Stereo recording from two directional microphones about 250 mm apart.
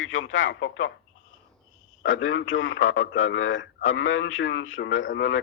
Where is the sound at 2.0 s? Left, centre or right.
Left.